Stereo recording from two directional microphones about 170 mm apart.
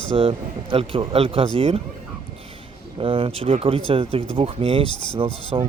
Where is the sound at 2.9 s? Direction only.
30° right (ahead or behind).